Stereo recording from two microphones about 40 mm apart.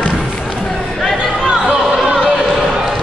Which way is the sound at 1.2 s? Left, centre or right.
Centre.